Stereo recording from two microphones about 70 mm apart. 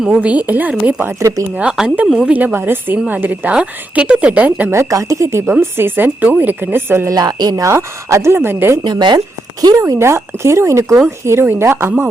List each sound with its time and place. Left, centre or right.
0.1 s a woman's voice: right
1.8 s speech: centre
2.1 s a woman's voice: centre
4.7 s speech: right
5.5 s a woman's voice: right
7.1 s a woman's voice: right
7.6 s speech: right
8.8 s speech: right
10.0 s speech: right